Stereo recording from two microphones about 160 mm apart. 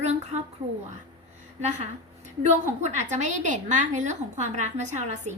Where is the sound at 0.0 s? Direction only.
45° right (ahead or behind).